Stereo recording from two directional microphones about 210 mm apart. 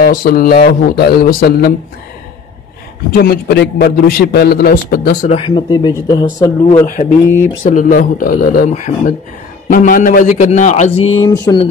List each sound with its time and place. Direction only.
0.0 s a man's voice: 45° left (ahead or behind)
3.1 s a man's voice: 50° left (ahead or behind)
5.4 s speech: 20° left (ahead or behind)
7.6 s speech: 40° left (ahead or behind)
11.1 s speech: 20° left (ahead or behind)